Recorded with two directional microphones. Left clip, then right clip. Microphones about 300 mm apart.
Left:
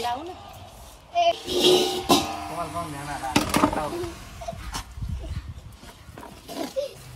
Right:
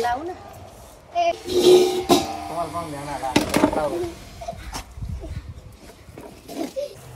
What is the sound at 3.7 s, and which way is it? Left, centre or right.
Speech, left.